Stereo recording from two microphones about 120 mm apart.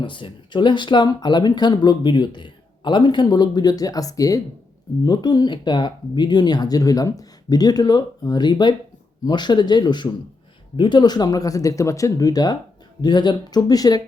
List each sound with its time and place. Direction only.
0.0 s speech: 45° left (ahead or behind)